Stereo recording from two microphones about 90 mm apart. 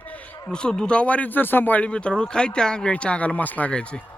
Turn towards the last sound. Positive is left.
turn(degrees=10)  # may be behind; listen again after turning